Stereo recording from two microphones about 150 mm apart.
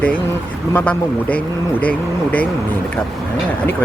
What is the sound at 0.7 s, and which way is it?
Speech, 10° left (ahead or behind).